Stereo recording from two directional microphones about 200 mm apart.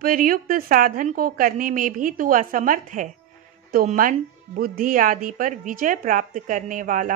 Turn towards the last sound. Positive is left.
turn(degrees=-40)  # may be behind; listen again after turning